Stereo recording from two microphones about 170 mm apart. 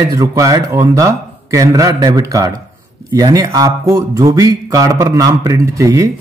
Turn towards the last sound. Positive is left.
turn(degrees=-20)  # may be behind; listen again after turning